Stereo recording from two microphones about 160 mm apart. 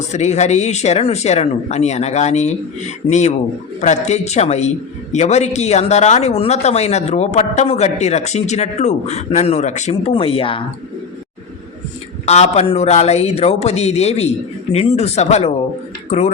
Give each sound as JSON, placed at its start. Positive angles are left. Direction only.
{"t": 0.1, "sound": "speech", "side_deg": 45}
{"t": 12.2, "sound": "a man's voice", "side_deg": 45}